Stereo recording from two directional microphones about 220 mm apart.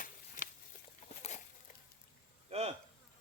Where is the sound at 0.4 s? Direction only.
35° left (ahead or behind).